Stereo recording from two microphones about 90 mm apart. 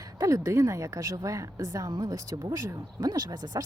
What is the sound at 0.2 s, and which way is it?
Speech, 35° right (ahead or behind).